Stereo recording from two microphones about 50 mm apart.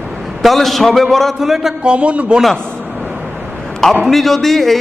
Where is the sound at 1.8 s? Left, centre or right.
Right.